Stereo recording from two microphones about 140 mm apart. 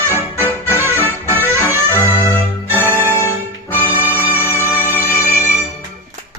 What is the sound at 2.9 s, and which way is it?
Music, 15° right (ahead or behind).